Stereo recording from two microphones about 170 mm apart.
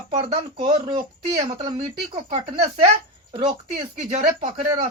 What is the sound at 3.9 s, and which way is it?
Speech, 45° right (ahead or behind).